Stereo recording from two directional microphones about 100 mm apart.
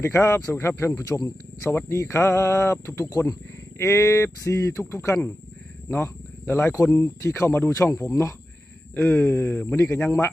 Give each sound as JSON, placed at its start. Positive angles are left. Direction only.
{"t": 0.0, "sound": "speech", "side_deg": 25}